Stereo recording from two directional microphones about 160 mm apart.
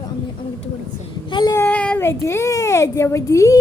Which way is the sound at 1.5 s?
10° left (ahead or behind).